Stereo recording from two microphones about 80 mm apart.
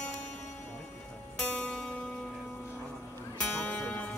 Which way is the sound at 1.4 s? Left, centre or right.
Centre.